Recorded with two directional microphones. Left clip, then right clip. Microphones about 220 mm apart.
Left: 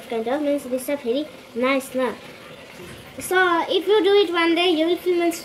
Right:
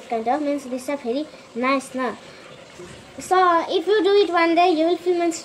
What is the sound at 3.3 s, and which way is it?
A woman's voice, centre (ahead or behind).